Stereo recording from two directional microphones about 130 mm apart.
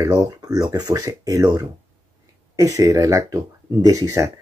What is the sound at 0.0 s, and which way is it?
Speech, 30° right (ahead or behind).